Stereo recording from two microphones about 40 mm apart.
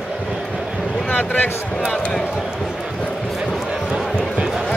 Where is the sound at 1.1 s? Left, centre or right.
Left.